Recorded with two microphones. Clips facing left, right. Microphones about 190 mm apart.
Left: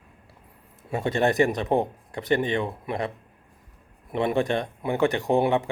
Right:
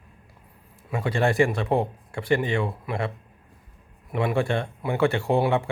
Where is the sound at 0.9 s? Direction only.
25° left (ahead or behind).